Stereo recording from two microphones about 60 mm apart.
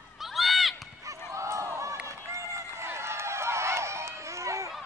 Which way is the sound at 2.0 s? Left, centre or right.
Right.